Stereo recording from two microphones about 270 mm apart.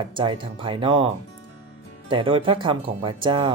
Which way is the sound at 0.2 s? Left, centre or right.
Centre.